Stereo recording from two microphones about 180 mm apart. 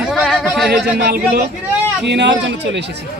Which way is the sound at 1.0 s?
65° right (ahead or behind).